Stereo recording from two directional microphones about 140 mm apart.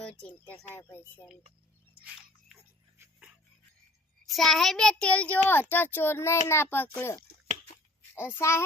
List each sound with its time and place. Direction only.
0.0 s a child's voice: 10° left (ahead or behind)
4.3 s a child's voice: centre (ahead or behind); by 8.6 s 20° left (ahead or behind)